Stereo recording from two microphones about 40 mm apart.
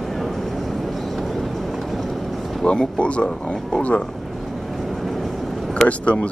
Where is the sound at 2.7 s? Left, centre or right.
Left.